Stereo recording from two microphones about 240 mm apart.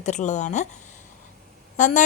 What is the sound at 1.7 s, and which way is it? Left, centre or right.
Speech, left.